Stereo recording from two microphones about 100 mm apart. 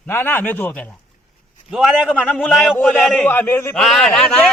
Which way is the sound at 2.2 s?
10° left (ahead or behind).